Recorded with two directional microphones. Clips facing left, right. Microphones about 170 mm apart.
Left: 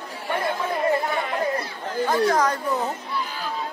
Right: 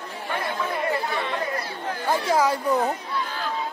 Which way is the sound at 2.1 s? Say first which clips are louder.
Even; 10° right (ahead or behind).